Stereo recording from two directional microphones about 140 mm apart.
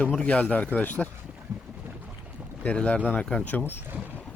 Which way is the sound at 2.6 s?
10° left (ahead or behind).